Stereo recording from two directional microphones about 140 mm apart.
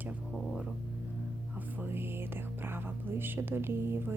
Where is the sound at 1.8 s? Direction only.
15° right (ahead or behind).